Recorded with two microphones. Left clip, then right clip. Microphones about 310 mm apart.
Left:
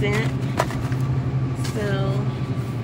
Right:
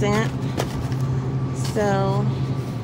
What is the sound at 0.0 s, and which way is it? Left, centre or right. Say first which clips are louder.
Clip-clop: right 2 dB; right.